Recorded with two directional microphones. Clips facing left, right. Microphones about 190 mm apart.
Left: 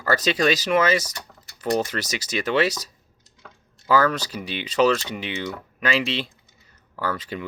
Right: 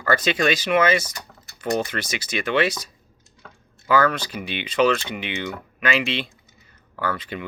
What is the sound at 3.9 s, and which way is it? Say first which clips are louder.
Speech: even; 35° left (ahead or behind).